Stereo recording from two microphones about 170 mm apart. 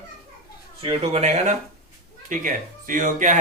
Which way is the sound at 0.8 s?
35° right (ahead or behind).